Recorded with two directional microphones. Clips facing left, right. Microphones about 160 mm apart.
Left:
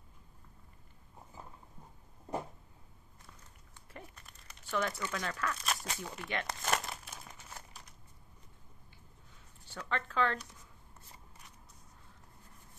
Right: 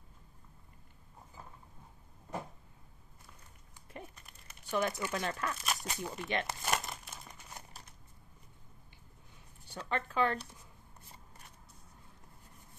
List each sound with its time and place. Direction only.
3.9 s a sound: 20° right (ahead or behind)
4.6 s speech: 15° right (ahead or behind)
5.6 s speech: 5° right (ahead or behind)
5.9 s speech: 15° right (ahead or behind)
6.4 s crumpling: centre (ahead or behind)
9.8 s speech: 15° right (ahead or behind)